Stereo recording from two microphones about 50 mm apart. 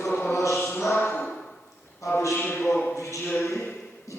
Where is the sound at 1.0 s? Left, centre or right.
Left.